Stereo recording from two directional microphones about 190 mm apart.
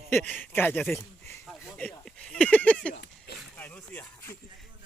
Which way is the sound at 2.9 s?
60° left (ahead or behind).